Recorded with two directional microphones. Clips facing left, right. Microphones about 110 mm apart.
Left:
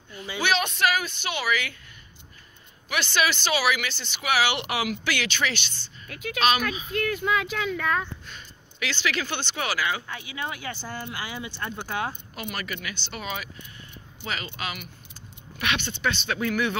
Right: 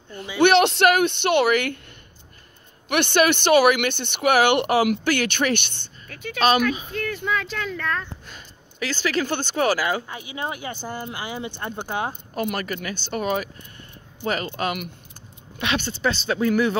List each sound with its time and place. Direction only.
0.4 s speech: 65° right (ahead or behind)
2.9 s speech: 60° right (ahead or behind)
6.0 s speech: 5° left (ahead or behind)
8.7 s speech: 40° right (ahead or behind)
10.0 s speech: 20° right (ahead or behind)
12.1 s speech: 45° right (ahead or behind)
15.6 s speech: 35° right (ahead or behind)